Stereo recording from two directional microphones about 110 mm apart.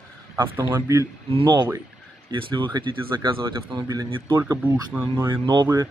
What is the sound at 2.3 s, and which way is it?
Speech, 45° right (ahead or behind).